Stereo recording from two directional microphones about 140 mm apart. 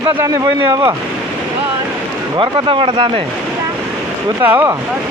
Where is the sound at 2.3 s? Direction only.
35° right (ahead or behind).